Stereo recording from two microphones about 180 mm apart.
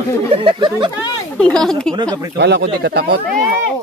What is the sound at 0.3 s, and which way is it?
Speech, 30° right (ahead or behind).